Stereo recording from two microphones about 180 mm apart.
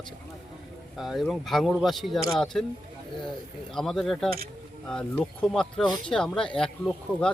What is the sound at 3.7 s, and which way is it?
Speech, centre (ahead or behind).